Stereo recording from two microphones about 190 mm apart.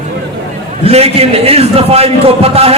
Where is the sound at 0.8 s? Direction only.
30° right (ahead or behind).